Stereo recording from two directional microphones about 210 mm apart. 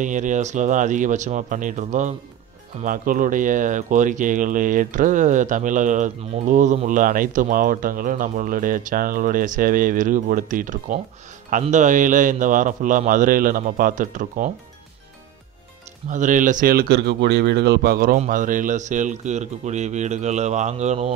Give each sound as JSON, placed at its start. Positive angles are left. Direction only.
{"t": 0.0, "sound": "speech", "side_deg": -35}
{"t": 16.1, "sound": "speech", "side_deg": -35}